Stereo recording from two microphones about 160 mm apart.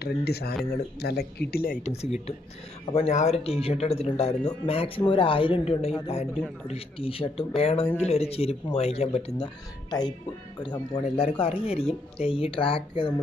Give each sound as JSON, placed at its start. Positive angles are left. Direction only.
{"t": 0.0, "sound": "speech", "side_deg": 80}
{"t": 1.8, "sound": "speech", "side_deg": 40}
{"t": 9.8, "sound": "speech", "side_deg": 25}